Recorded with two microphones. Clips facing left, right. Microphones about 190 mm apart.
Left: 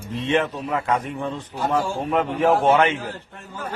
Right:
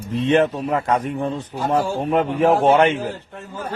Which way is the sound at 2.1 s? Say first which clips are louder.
Right 2 dB; centre (ahead or behind).